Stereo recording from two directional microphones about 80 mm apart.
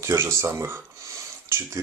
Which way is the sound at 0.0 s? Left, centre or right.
Right.